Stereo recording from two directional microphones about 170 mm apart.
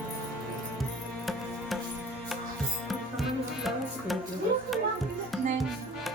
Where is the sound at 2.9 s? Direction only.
Centre (ahead or behind).